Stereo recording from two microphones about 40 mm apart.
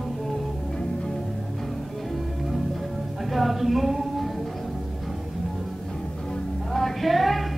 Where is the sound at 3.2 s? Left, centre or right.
Centre.